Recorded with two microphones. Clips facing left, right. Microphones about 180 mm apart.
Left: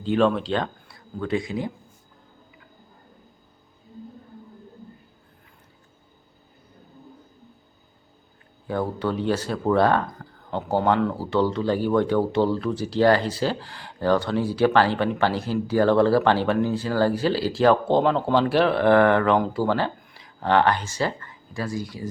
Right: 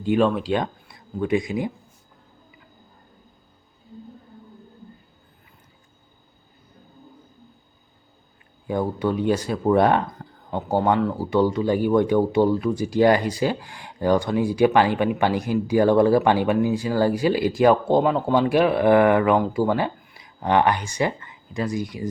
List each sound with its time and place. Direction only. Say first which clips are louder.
0.0 s speech: right 1 dB; 10° right (ahead or behind)
8.6 s speech: right 2 dB; 15° right (ahead or behind)
10.2 s a sound: right 2 dB; 25° right (ahead or behind)
10.7 s speech: right 1 dB; 10° right (ahead or behind)